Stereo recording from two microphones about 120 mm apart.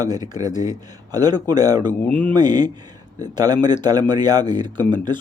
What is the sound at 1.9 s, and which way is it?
Speech, 15° left (ahead or behind).